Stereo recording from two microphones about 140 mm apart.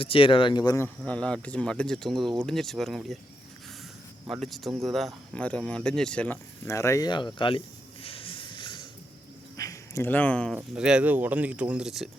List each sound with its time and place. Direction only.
0.0 s speech: 40° left (ahead or behind)
1.0 s speech: 10° left (ahead or behind)
4.3 s speech: centre (ahead or behind); by 7.1 s 20° left (ahead or behind)
7.1 s speech: 35° left (ahead or behind)
8.0 s a sound: 40° left (ahead or behind)
9.6 s a sound: 25° left (ahead or behind)
10.8 s speech: 5° right (ahead or behind)